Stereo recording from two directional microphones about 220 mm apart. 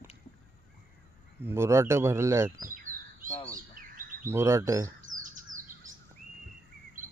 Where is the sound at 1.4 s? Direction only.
10° right (ahead or behind).